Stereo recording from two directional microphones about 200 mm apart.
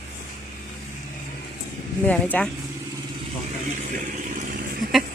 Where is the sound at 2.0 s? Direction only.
10° left (ahead or behind).